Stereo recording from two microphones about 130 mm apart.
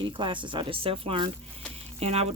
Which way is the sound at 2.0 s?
55° right (ahead or behind).